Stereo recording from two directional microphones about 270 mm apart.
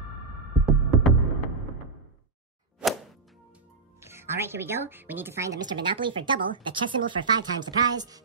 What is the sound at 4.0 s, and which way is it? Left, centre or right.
A woman's voice, centre.